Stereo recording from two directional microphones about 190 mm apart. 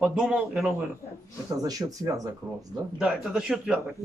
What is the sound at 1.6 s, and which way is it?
Speech, 20° right (ahead or behind).